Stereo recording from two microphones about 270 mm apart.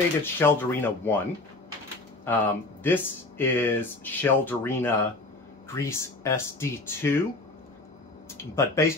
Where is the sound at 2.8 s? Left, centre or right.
Centre.